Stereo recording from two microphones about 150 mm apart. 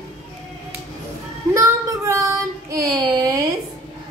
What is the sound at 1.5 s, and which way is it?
Child singing, 20° right (ahead or behind).